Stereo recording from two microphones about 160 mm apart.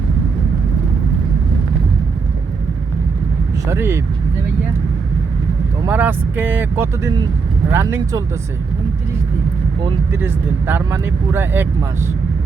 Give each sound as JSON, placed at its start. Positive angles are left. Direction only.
{"t": 3.7, "sound": "speech", "side_deg": -15}
{"t": 5.9, "sound": "speech", "side_deg": -10}
{"t": 10.1, "sound": "speech", "side_deg": -15}